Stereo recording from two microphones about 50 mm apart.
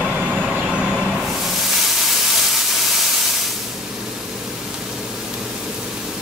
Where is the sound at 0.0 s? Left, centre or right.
Right.